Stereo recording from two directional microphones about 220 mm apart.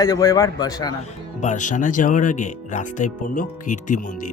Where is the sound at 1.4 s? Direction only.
35° left (ahead or behind).